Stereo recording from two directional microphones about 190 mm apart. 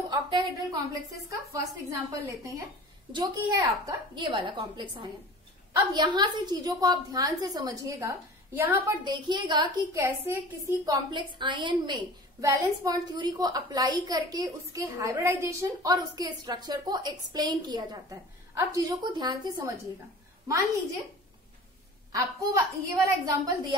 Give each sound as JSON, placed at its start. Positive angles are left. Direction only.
{"t": 0.1, "sound": "a woman's voice", "side_deg": -20}
{"t": 22.1, "sound": "a woman's voice", "side_deg": -15}